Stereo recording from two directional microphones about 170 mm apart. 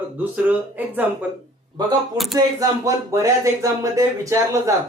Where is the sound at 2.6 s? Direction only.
20° right (ahead or behind).